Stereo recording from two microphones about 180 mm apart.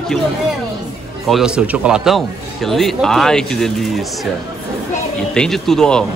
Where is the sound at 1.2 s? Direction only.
Centre (ahead or behind).